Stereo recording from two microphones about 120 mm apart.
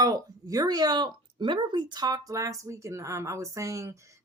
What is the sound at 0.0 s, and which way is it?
Speech, 30° right (ahead or behind).